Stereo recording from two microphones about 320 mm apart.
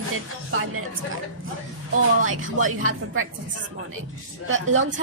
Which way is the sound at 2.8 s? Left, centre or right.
Right.